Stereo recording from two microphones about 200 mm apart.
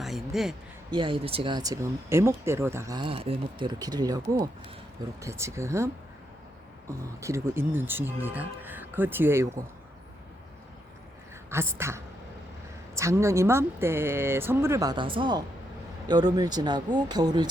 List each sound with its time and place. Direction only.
0.0 s a sound: centre (ahead or behind)
0.9 s speech: 25° right (ahead or behind)
7.2 s speech: 15° right (ahead or behind)
11.5 s speech: 15° right (ahead or behind)